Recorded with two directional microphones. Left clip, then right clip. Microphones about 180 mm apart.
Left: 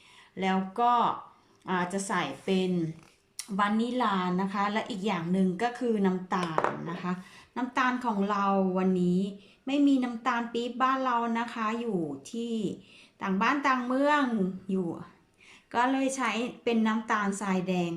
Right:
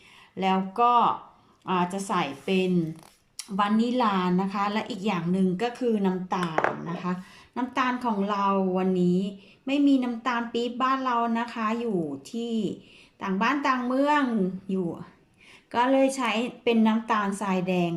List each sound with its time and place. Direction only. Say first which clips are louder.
0.3 s speech: right 4 dB; centre (ahead or behind)